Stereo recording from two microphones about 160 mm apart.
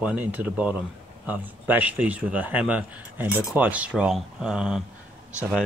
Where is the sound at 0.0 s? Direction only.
10° right (ahead or behind).